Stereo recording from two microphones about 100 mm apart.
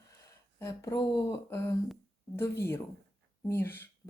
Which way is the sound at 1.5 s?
30° left (ahead or behind).